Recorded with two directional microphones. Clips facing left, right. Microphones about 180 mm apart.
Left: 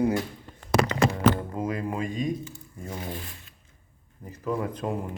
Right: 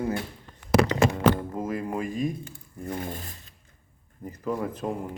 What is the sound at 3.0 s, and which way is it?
Speech, 45° right (ahead or behind).